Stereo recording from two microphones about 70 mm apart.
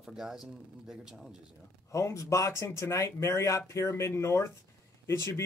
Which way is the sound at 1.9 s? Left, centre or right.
Left.